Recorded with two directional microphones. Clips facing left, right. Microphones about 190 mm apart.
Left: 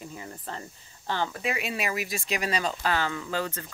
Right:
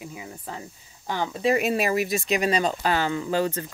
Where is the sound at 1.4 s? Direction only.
40° right (ahead or behind).